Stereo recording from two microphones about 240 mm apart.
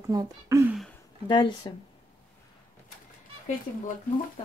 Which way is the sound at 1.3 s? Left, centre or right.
Centre.